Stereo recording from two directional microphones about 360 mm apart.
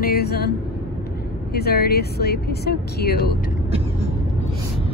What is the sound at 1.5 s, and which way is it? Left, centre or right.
Speech, left.